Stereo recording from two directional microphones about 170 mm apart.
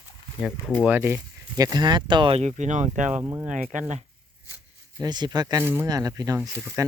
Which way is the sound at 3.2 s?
10° right (ahead or behind).